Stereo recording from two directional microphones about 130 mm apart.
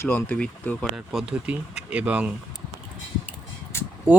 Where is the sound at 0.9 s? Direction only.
5° right (ahead or behind).